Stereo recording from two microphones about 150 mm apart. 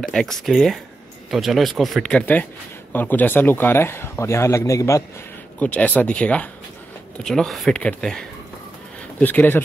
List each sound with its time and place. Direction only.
0.0 s speech: 5° left (ahead or behind); by 5.0 s 20° left (ahead or behind)
5.6 s speech: 10° left (ahead or behind)